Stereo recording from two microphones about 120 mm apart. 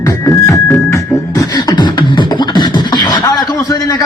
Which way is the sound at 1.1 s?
30° left (ahead or behind).